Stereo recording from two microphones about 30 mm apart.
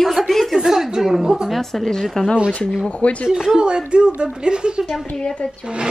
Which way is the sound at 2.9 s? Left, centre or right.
Left.